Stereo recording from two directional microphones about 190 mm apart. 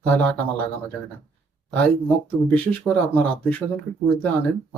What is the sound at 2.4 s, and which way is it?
Speech, 10° left (ahead or behind).